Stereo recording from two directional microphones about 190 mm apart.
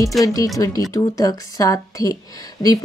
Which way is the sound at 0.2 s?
20° left (ahead or behind).